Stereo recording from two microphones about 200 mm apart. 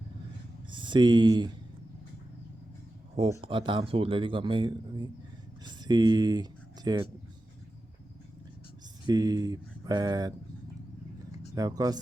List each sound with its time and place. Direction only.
0.7 s speech: 25° right (ahead or behind)
3.4 s speech: 25° right (ahead or behind)
9.0 s speech: 20° right (ahead or behind)
11.5 s speech: 20° right (ahead or behind)